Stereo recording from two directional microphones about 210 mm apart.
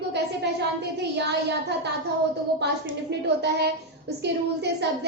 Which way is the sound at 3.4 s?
50° right (ahead or behind).